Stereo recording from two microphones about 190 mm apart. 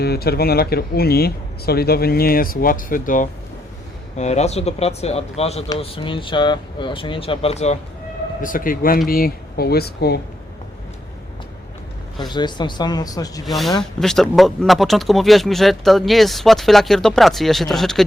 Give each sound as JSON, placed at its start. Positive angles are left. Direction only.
{"t": 0.0, "sound": "speech", "side_deg": 55}
{"t": 8.4, "sound": "speech", "side_deg": 45}
{"t": 12.3, "sound": "speech", "side_deg": 25}
{"t": 13.4, "sound": "speech", "side_deg": 0}